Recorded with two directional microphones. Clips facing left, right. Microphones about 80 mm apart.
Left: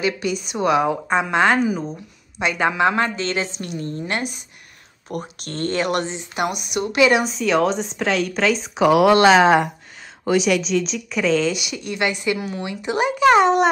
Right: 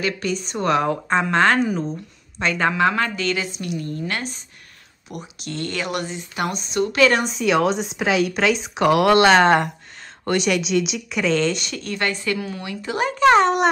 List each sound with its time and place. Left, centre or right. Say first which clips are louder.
0.0 s a woman's voice: left 2 dB; centre
2.9 s speech: left 1 dB; left
5.1 s speech: left 3 dB; left; by 7.2 s centre
7.2 s a woman's voice: even; centre; by 12.9 s left
12.9 s a woman's voice: even; centre